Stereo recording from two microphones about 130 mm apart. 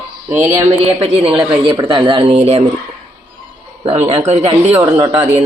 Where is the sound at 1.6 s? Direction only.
40° right (ahead or behind).